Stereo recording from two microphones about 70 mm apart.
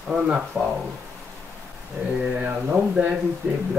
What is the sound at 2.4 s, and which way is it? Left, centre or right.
Speech, right.